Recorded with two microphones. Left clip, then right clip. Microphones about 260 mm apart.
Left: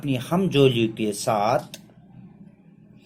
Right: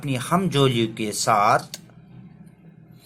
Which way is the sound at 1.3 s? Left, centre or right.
Centre.